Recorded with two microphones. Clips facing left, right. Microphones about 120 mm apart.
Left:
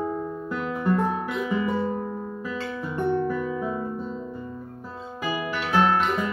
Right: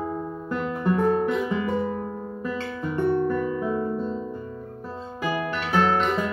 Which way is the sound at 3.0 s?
5° left (ahead or behind).